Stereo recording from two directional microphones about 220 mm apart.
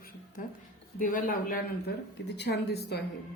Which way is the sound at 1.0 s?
40° left (ahead or behind).